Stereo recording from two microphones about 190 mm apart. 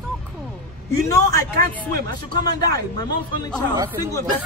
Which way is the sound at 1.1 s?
15° left (ahead or behind).